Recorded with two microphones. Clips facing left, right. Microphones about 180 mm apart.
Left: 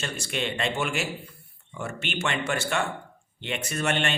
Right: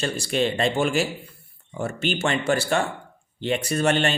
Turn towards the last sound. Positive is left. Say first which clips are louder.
# right 6 dB
turn(degrees=-35)  # may be behind; listen again after turning